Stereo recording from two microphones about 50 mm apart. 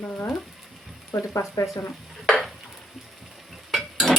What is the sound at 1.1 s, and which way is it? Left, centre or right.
Speech, left.